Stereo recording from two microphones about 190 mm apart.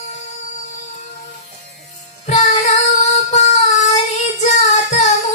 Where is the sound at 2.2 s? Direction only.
40° left (ahead or behind).